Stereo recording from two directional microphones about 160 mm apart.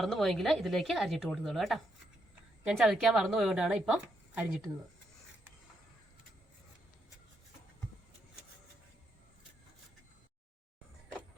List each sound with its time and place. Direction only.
0.0 s a woman's voice: centre (ahead or behind)